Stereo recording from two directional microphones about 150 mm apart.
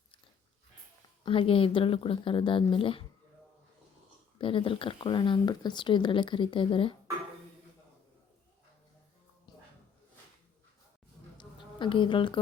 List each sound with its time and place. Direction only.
1.2 s speech: 35° left (ahead or behind)
4.4 s speech: 35° left (ahead or behind)
9.5 s music: 30° left (ahead or behind)
11.3 s a sound: 35° left (ahead or behind)